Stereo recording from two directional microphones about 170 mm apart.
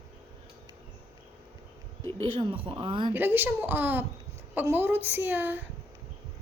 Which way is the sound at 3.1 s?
10° right (ahead or behind).